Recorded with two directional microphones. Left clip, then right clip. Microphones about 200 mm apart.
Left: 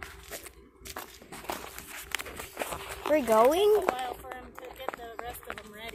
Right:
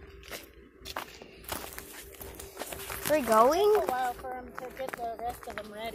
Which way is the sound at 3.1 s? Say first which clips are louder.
Left 1 dB; 15° left (ahead or behind).